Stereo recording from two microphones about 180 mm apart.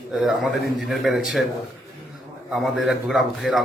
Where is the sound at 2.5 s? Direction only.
Centre (ahead or behind).